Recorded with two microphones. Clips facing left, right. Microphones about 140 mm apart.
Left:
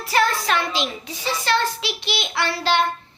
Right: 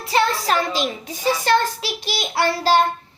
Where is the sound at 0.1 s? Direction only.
30° right (ahead or behind).